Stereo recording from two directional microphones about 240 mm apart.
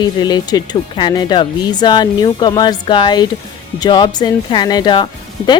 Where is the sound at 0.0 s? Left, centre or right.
Centre.